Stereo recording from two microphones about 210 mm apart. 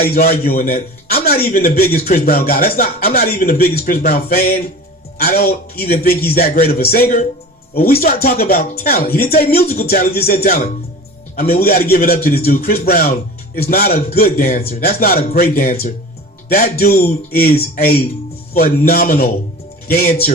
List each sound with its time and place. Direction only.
0.0 s a man's voice: 45° left (ahead or behind)
11.6 s a man's voice: 45° left (ahead or behind)